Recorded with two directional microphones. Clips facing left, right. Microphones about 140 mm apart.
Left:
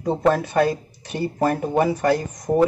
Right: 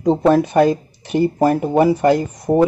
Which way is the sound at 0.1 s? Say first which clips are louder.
Right 5 dB; 20° right (ahead or behind).